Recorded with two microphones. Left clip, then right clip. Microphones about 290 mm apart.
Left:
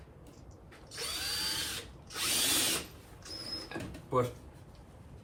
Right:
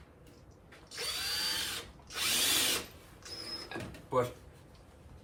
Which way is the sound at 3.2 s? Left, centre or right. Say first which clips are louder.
Left 1 dB; centre.